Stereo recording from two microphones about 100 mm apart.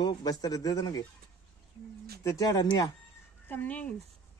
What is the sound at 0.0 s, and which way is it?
Speech, 40° left (ahead or behind).